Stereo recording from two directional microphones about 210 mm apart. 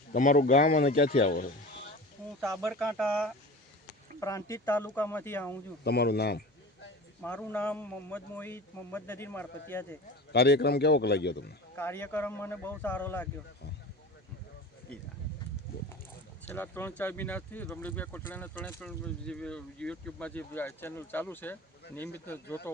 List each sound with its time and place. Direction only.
0.1 s a man's voice: 40° left (ahead or behind)
2.4 s speech: centre (ahead or behind)
4.2 s speech: 15° left (ahead or behind)
5.8 s a man's voice: 50° left (ahead or behind)
7.2 s speech: 5° left (ahead or behind)
10.3 s a man's voice: 50° left (ahead or behind)
11.8 s speech: 10° left (ahead or behind)
16.6 s speech: 10° left (ahead or behind)